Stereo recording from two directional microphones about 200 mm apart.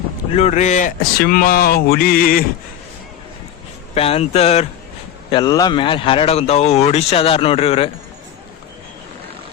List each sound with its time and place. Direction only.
0.3 s speech: 35° left (ahead or behind)
3.9 s speech: 30° left (ahead or behind)
5.3 s speech: 20° left (ahead or behind)